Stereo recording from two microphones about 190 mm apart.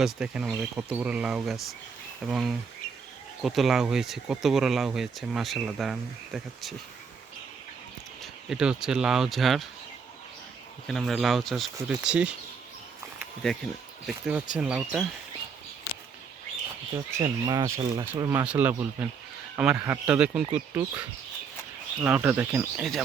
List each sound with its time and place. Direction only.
0.0 s speech: 5° right (ahead or behind)
8.2 s speech: 5° right (ahead or behind)
10.8 s speech: centre (ahead or behind)
13.1 s a sound: centre (ahead or behind)
14.1 s speech: 5° right (ahead or behind)
17.2 s speech: 20° right (ahead or behind); by 23.0 s 5° right (ahead or behind)